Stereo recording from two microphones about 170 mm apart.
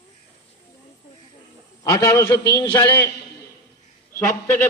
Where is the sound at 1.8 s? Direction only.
20° left (ahead or behind).